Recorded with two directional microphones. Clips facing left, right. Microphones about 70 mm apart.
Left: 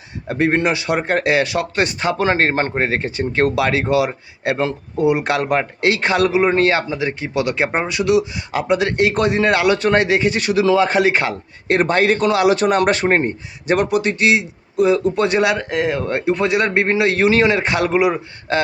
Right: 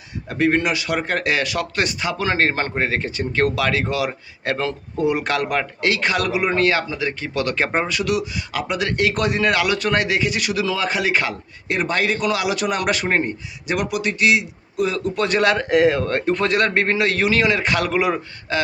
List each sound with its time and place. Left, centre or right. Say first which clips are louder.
0.3 s a man's voice: left 2 dB; left
15.7 s speech: right 4 dB; centre
16.0 s a man's voice: left 2 dB; centre